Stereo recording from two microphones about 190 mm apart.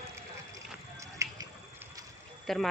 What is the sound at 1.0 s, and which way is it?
Music, 15° right (ahead or behind).